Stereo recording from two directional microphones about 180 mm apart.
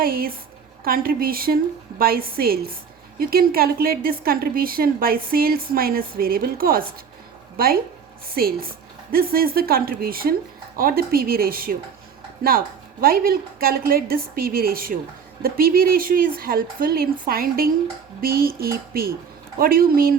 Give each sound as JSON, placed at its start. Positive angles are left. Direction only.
{"t": 0.0, "sound": "a woman's voice", "side_deg": -55}